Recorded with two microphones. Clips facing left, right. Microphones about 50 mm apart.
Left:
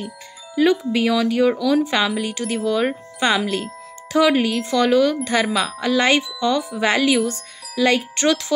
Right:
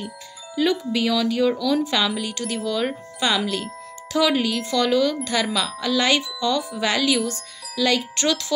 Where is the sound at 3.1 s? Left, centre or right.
Left.